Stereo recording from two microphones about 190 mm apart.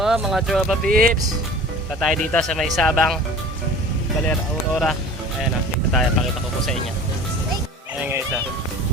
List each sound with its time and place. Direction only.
0.0 s speech: centre (ahead or behind)
0.9 s speech: 50° right (ahead or behind)
2.0 s speech: centre (ahead or behind)
4.3 s speech: 5° left (ahead or behind)